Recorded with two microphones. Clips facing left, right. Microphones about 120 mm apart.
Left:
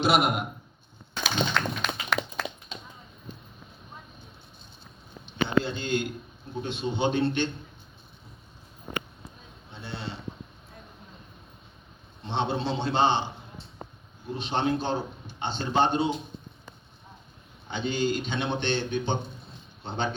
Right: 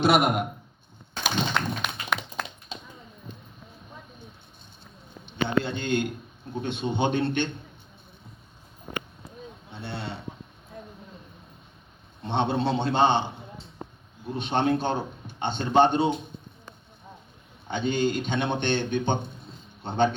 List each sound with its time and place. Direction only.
0.0 s a man's voice: 55° right (ahead or behind)
1.2 s a sound: 10° right (ahead or behind)
5.6 s a man's voice: 55° right (ahead or behind)
9.8 s speech: 60° right (ahead or behind)
12.2 s a man's voice: 55° right (ahead or behind)
14.3 s a man's voice: 55° right (ahead or behind)
17.7 s a man's voice: 55° right (ahead or behind)